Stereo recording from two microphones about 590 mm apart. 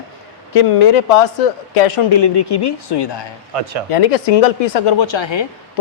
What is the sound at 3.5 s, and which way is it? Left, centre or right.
Speech, right.